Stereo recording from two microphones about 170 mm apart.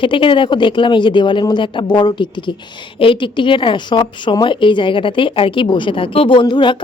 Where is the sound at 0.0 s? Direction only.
30° left (ahead or behind).